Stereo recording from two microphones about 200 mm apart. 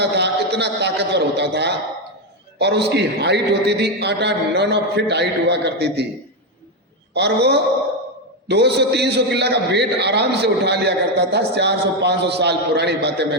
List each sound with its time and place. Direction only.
0.0 s a sound: 55° right (ahead or behind)
2.6 s a man's voice: 55° right (ahead or behind)
7.1 s a man's voice: 55° right (ahead or behind)